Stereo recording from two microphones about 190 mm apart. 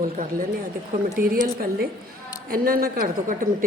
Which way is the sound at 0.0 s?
45° right (ahead or behind).